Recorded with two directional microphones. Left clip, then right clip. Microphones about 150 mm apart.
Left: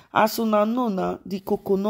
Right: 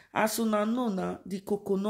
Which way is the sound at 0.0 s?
30° left (ahead or behind).